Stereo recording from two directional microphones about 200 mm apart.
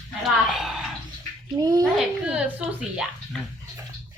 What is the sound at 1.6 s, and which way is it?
Speech, 20° right (ahead or behind).